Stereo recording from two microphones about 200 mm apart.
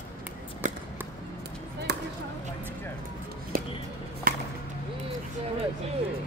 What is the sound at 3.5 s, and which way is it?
Music, 45° right (ahead or behind).